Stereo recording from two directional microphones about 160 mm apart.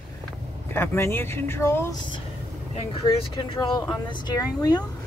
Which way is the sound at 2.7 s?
35° left (ahead or behind).